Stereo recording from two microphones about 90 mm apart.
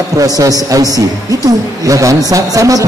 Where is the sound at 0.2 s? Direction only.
40° right (ahead or behind).